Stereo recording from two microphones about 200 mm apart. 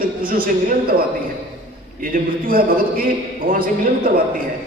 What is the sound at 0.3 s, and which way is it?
Speech, 45° right (ahead or behind).